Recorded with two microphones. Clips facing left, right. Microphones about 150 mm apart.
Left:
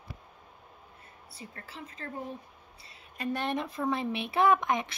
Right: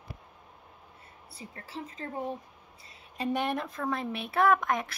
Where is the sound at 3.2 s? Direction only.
20° right (ahead or behind).